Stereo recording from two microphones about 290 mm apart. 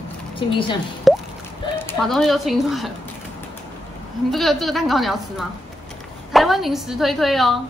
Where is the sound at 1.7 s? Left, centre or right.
Centre.